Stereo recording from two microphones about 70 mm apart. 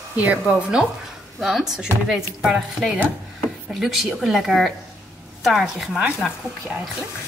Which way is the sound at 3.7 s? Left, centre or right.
Centre.